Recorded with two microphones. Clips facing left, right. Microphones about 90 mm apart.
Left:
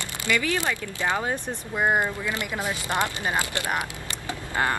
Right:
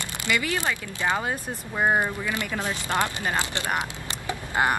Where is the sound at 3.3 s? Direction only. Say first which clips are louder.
Left 1 dB; 20° right (ahead or behind).